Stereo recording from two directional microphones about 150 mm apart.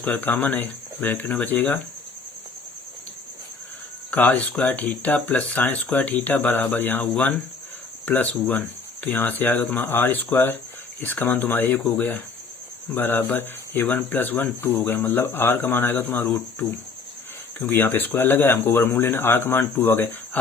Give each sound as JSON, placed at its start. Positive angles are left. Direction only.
{"t": 0.0, "sound": "speech", "side_deg": 10}
{"t": 4.1, "sound": "speech", "side_deg": 10}